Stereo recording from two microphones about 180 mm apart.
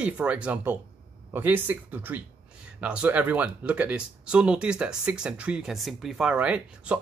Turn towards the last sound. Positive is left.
turn(degrees=-5)  # may be behind; listen again after turning